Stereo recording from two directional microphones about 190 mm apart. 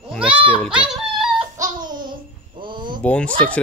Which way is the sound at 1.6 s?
20° right (ahead or behind).